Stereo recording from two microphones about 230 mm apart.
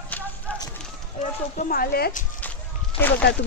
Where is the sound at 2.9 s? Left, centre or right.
Left.